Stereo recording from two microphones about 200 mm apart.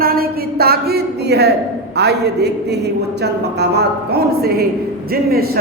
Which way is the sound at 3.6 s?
55° right (ahead or behind).